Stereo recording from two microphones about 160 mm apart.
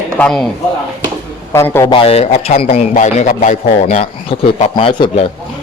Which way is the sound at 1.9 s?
35° left (ahead or behind).